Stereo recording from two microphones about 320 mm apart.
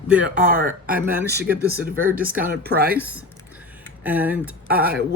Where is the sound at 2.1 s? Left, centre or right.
Centre.